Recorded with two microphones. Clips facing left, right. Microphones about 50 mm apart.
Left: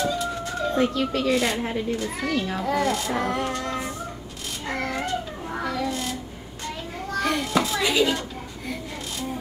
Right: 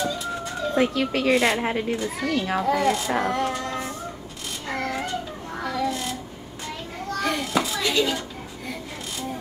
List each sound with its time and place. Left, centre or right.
0.0 s a sound: centre
0.8 s speech: centre
1.6 s speech: right
1.9 s child singing: centre
4.6 s a sound: centre
7.1 s children playing: centre
7.8 s speech: centre